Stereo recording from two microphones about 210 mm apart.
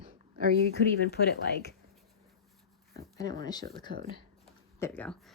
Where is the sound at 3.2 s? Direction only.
20° left (ahead or behind).